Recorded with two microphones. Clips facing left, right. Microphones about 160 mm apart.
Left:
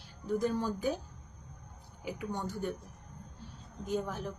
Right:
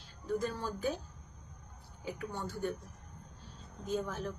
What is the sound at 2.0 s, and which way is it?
Speech, 15° left (ahead or behind).